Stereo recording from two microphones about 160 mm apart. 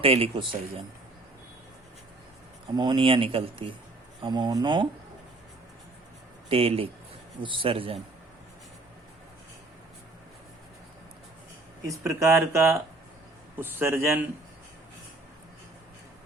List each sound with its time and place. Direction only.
0.0 s speech: 35° right (ahead or behind)
2.7 s speech: 25° right (ahead or behind)
6.5 s speech: 35° right (ahead or behind)
11.9 s speech: 20° right (ahead or behind)